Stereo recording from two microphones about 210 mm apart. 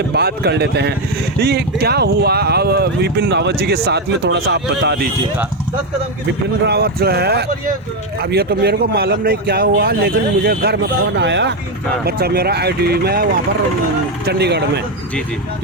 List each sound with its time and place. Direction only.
0.1 s speech: 50° right (ahead or behind)
6.7 s speech: 50° right (ahead or behind)
11.2 s speech: 55° right (ahead or behind)
14.3 s speech: 50° right (ahead or behind)